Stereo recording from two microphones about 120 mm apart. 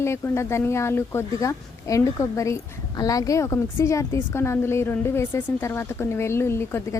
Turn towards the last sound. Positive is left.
turn(degrees=20)  # may be behind; listen again after turning